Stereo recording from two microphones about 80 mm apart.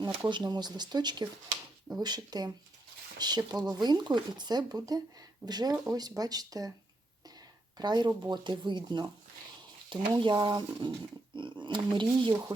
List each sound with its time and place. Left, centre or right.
0.3 s speech: right
7.8 s speech: right
9.9 s speech: right
11.3 s speech: right